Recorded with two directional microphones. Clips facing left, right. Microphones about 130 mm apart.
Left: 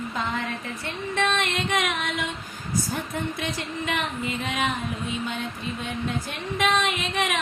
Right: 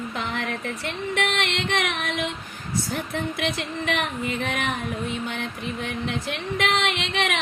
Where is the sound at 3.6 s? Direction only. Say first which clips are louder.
Right 2 dB; 60° right (ahead or behind).